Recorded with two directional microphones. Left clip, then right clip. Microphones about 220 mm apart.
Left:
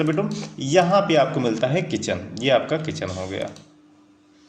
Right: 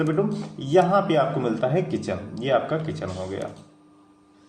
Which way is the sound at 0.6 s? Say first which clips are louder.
Left 2 dB; 20° left (ahead or behind).